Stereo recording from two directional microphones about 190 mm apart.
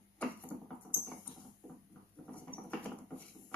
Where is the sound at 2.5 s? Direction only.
5° left (ahead or behind).